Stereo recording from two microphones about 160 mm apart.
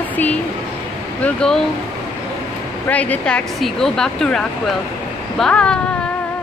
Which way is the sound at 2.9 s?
10° left (ahead or behind).